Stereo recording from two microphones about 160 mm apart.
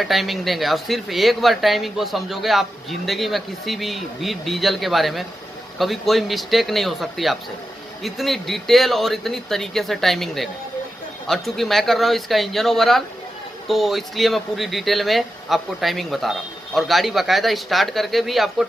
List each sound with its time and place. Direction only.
0.0 s speech: centre (ahead or behind)